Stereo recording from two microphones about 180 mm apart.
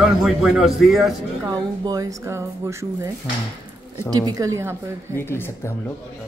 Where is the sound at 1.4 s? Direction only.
20° right (ahead or behind).